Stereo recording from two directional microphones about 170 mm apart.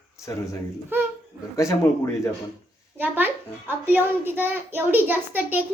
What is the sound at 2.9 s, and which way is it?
A child's voice, 10° right (ahead or behind).